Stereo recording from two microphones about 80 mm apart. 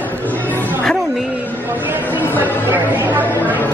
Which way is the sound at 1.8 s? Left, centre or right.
Right.